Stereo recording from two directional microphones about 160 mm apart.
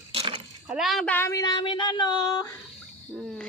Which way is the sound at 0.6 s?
5° right (ahead or behind).